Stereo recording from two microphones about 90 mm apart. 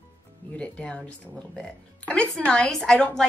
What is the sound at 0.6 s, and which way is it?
Speech, 10° left (ahead or behind).